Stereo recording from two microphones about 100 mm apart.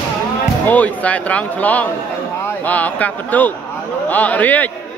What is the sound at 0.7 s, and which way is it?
A man's voice, 15° left (ahead or behind).